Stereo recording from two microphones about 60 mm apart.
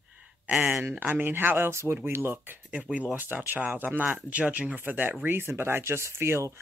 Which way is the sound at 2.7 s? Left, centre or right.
Right.